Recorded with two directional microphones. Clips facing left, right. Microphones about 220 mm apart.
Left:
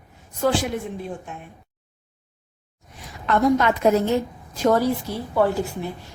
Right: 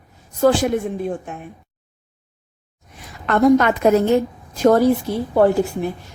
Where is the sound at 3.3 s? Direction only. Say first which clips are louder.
Right 5 dB; 55° right (ahead or behind).